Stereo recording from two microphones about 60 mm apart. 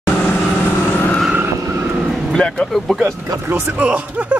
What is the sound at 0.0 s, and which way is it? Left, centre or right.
Vehicle, left.